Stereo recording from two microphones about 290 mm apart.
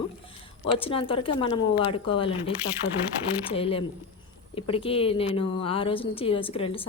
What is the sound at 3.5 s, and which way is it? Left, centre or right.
A woman's voice, centre.